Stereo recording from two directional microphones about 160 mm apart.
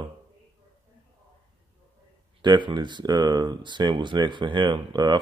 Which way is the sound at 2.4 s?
30° right (ahead or behind).